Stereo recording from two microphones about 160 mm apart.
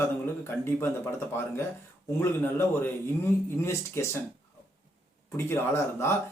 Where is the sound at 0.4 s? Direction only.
15° left (ahead or behind).